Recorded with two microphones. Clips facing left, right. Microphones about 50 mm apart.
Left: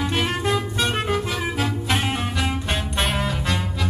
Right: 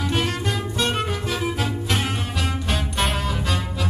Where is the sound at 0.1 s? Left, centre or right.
Centre.